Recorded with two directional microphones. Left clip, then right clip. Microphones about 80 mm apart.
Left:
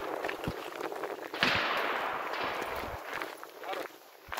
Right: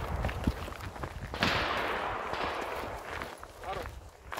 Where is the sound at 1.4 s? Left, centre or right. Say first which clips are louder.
Left 1 dB; right.